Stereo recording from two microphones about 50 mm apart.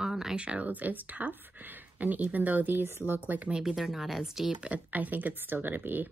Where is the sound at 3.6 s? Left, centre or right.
Centre.